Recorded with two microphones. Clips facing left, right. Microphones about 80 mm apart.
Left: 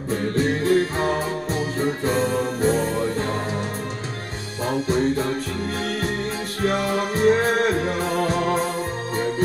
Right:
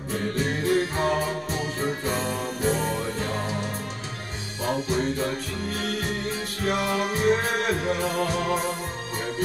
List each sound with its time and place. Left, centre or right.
0.7 s music: left
4.6 s music: left